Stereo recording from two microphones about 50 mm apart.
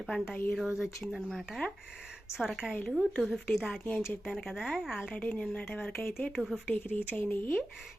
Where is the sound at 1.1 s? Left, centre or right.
Centre.